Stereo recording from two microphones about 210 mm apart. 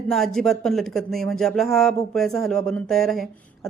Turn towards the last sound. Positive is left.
turn(degrees=0)  # may be behind; listen again after turning